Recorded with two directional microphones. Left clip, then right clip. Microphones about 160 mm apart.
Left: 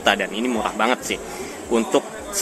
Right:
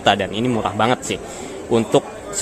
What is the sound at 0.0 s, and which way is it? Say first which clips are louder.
Speech: right 2 dB; 25° right (ahead or behind).